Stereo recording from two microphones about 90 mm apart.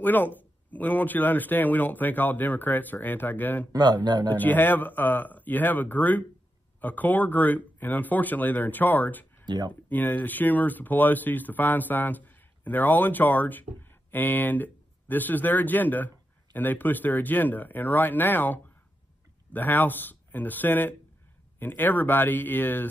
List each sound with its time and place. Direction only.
0.0 s speech: 20° left (ahead or behind)
3.7 s speech: 50° right (ahead or behind)
4.4 s speech: 20° left (ahead or behind)